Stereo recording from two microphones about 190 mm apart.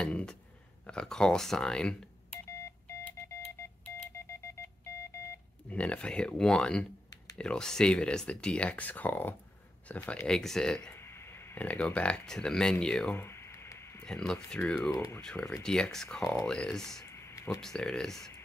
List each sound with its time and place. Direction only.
0.0 s speech: 5° left (ahead or behind)
2.6 s telephone dialing: 10° left (ahead or behind)
4.2 s a sound: 15° left (ahead or behind)
5.7 s speech: 5° left (ahead or behind)
17.0 s a sound: 15° left (ahead or behind)
17.6 s speech: 5° left (ahead or behind)